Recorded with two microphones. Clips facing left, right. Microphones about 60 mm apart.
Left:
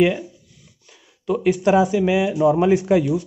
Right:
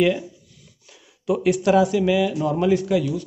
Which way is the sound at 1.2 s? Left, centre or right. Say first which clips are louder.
Left 1 dB; centre.